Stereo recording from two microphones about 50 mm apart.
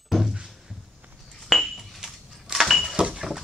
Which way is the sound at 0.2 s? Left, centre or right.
Centre.